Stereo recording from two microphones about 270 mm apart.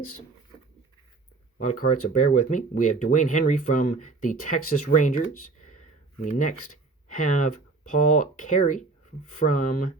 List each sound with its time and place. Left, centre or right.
1.8 s speech: left